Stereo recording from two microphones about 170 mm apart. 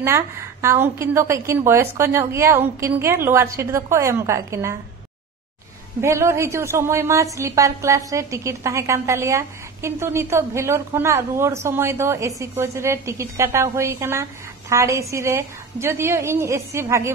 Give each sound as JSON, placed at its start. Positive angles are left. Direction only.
{"t": 0.0, "sound": "a woman's voice", "side_deg": -15}
{"t": 5.9, "sound": "a woman's voice", "side_deg": -15}